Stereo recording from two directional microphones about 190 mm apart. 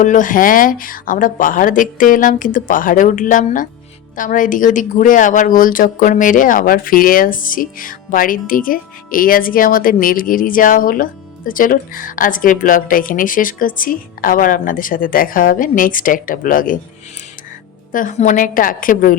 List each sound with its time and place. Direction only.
0.0 s speech: 45° left (ahead or behind)
17.9 s speech: 40° left (ahead or behind)